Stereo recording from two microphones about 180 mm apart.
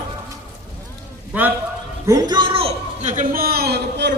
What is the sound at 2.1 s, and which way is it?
A man's voice, 20° right (ahead or behind).